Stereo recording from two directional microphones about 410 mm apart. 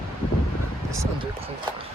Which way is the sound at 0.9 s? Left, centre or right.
Centre.